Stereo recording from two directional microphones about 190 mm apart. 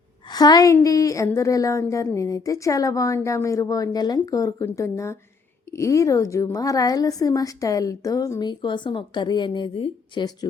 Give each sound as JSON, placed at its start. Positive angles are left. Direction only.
{"t": 0.3, "sound": "a woman's voice", "side_deg": 20}